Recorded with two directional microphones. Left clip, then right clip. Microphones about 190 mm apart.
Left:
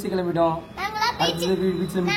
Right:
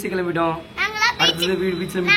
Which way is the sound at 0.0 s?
Centre (ahead or behind).